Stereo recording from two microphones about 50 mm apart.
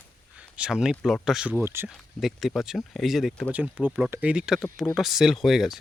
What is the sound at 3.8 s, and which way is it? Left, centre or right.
Speech, right.